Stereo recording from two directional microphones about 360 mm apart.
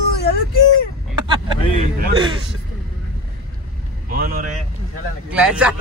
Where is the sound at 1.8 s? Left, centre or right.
Centre.